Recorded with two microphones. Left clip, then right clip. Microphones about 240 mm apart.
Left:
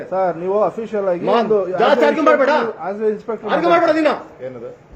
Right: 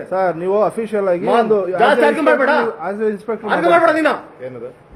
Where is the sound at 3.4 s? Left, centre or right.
Centre.